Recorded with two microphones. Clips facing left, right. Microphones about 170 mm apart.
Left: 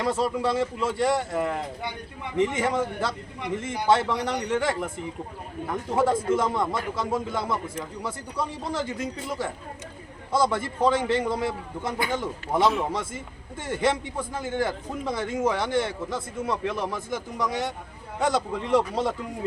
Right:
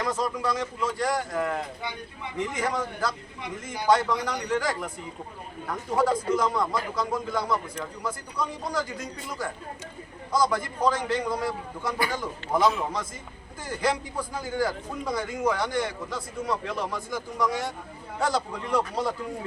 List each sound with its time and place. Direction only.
0.0 s a man's voice: 25° left (ahead or behind)
10.3 s a man's voice: 25° left (ahead or behind)